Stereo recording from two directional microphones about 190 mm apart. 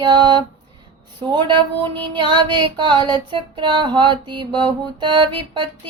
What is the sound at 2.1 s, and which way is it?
Music, 25° right (ahead or behind).